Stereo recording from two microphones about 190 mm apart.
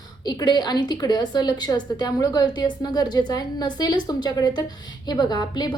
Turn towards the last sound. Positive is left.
turn(degrees=20)  # may be behind; listen again after turning